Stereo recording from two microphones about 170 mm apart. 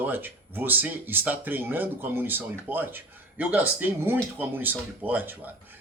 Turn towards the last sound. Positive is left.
turn(degrees=-10)  # may be behind; listen again after turning